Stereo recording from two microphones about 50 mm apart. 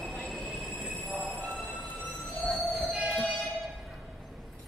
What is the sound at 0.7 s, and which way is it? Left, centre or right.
Train, centre.